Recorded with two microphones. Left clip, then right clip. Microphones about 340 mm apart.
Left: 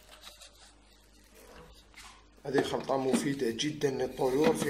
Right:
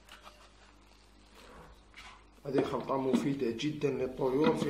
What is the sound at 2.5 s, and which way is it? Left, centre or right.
Speech, left.